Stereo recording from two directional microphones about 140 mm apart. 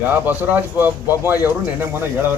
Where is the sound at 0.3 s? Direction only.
15° right (ahead or behind).